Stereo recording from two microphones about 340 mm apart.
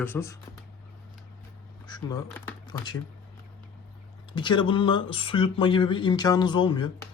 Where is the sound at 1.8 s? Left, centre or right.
Centre.